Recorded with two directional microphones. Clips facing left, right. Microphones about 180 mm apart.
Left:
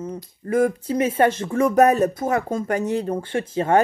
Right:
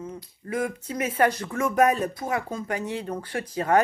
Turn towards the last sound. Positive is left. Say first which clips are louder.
# left 4 dB
turn(degrees=25)  # may be behind; listen again after turning